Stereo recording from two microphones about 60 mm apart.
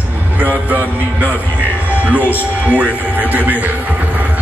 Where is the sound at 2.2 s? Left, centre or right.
Left.